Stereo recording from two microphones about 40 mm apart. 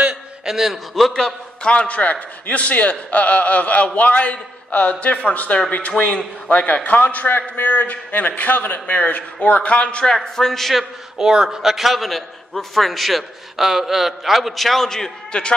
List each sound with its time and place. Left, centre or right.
0.5 s a man's voice: centre
0.9 s a man's voice: centre
1.2 s a man's voice: left
10.1 s a man's voice: centre
10.8 s a man's voice: centre